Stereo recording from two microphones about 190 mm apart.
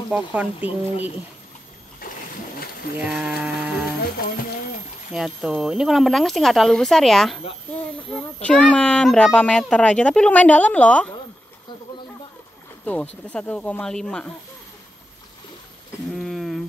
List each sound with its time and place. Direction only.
0.1 s speech: 10° right (ahead or behind)
3.0 s speech: 5° right (ahead or behind)
4.0 s music: 50° left (ahead or behind)
5.1 s speech: 5° right (ahead or behind)
12.8 s speech: 10° left (ahead or behind)
16.1 s a sound: centre (ahead or behind)